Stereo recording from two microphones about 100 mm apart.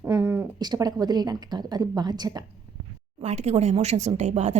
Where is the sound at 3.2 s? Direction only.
90° right.